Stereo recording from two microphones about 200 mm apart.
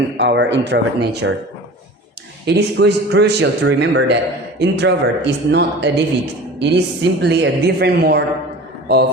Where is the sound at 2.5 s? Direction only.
60° right (ahead or behind).